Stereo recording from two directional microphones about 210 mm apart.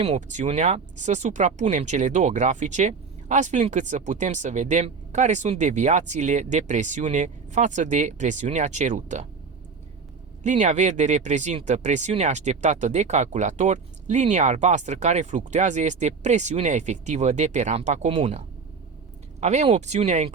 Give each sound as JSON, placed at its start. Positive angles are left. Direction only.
{"t": 0.0, "sound": "speech", "side_deg": -30}
{"t": 10.4, "sound": "speech", "side_deg": -35}